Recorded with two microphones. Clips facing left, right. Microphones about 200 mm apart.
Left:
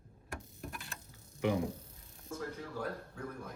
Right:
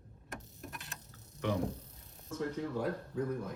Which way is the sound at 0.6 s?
Centre (ahead or behind).